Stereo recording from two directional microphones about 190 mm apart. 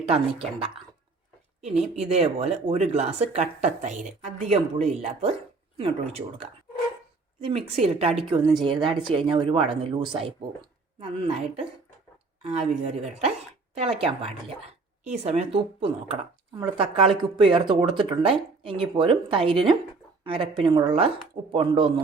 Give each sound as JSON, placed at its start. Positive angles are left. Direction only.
{"t": 0.1, "sound": "speech", "side_deg": -30}
{"t": 7.8, "sound": "speech", "side_deg": -30}